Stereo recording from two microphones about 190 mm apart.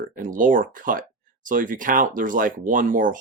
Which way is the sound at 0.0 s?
45° right (ahead or behind).